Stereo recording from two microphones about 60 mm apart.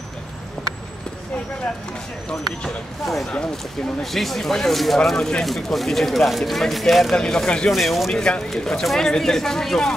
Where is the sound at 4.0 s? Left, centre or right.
Centre.